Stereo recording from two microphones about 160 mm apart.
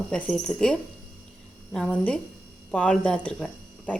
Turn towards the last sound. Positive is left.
turn(degrees=5)  # may be behind; listen again after turning